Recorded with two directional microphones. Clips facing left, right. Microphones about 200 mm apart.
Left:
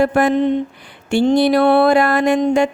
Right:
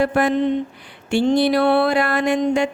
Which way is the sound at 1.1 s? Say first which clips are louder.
Left 3 dB; 45° left (ahead or behind).